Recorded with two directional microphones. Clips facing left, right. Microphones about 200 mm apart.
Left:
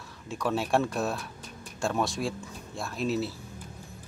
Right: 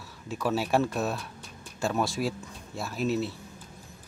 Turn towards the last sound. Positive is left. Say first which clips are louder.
# right 1 dB
turn(degrees=0)  # may be behind; listen again after turning